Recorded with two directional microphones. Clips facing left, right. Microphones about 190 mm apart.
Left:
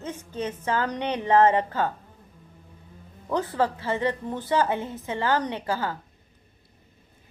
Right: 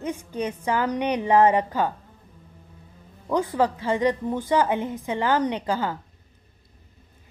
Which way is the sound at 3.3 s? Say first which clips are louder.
Right 3 dB; 15° right (ahead or behind).